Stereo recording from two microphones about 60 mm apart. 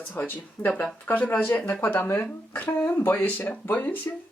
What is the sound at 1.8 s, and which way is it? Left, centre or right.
Speech, left.